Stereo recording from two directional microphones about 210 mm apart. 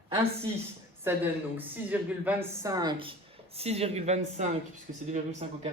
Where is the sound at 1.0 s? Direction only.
10° right (ahead or behind).